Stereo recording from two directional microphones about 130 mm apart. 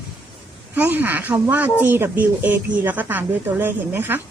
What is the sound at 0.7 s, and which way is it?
Speech, 15° right (ahead or behind).